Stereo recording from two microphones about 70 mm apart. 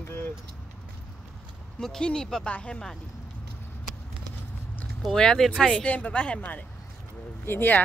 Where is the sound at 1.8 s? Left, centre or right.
Centre.